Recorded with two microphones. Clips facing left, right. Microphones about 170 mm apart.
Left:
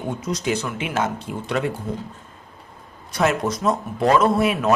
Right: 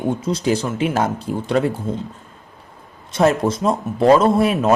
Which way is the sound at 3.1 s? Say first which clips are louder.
Right 5 dB; 30° right (ahead or behind).